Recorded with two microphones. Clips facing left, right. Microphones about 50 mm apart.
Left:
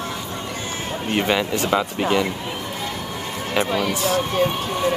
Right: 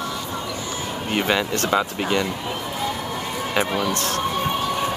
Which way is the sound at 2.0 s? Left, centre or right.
Centre.